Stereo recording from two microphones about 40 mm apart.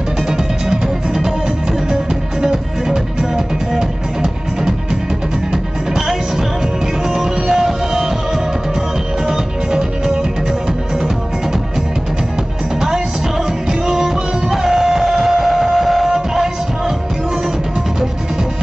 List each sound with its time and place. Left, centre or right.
0.3 s music: centre
2.4 s music: centre
9.3 s music: centre
13.7 s music: centre